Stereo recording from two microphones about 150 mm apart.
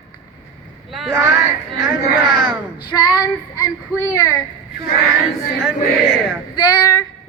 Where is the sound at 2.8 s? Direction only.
30° left (ahead or behind).